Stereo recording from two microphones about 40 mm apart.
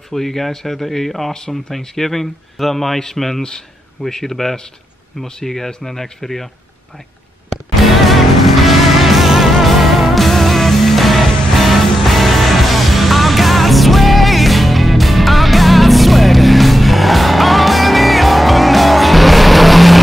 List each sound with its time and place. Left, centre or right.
0.1 s speech: centre
8.0 s music: centre